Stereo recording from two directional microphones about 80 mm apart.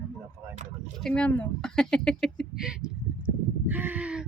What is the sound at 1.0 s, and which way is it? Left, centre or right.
Speech, centre.